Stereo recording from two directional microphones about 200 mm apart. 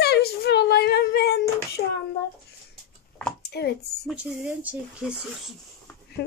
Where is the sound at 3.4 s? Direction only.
55° left (ahead or behind).